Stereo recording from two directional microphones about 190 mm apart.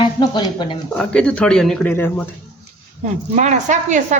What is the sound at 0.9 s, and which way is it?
Speech, 5° left (ahead or behind).